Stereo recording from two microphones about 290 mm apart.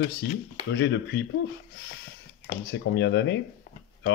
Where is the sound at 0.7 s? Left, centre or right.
Left.